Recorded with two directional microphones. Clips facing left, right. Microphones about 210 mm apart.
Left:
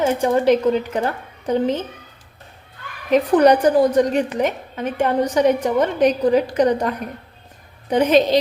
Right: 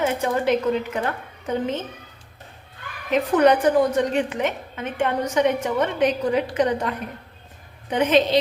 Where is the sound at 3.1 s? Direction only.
40° left (ahead or behind).